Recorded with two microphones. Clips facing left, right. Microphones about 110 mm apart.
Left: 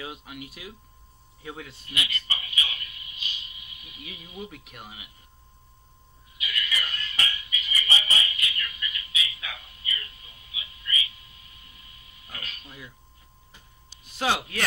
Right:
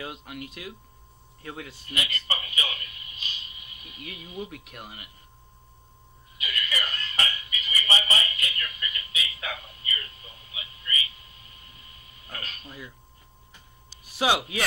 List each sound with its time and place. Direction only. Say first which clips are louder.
0.0 s speech: right 1 dB; 5° left (ahead or behind)
1.9 s a man's voice: right 2 dB; 40° right (ahead or behind)
4.0 s speech: right 3 dB; centre (ahead or behind)
6.3 s a sound: right 1 dB; 40° right (ahead or behind)
12.3 s speech: right 2 dB; 40° right (ahead or behind)
14.1 s speech: right 2 dB; 5° right (ahead or behind)